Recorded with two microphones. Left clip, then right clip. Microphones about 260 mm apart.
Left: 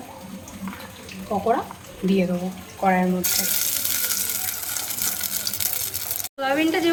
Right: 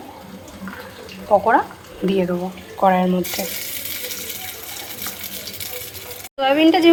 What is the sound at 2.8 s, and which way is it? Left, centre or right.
Speech, right.